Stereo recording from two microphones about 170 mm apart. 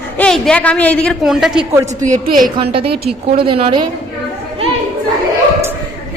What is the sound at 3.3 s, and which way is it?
Speech, 35° right (ahead or behind).